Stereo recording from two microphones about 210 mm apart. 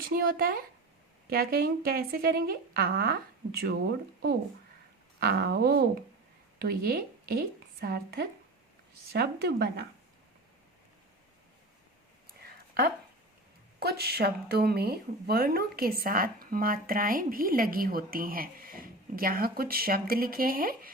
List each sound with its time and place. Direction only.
0.1 s a woman's voice: 45° right (ahead or behind)
5.2 s a woman's voice: 50° right (ahead or behind)
13.7 s a woman's voice: 50° right (ahead or behind)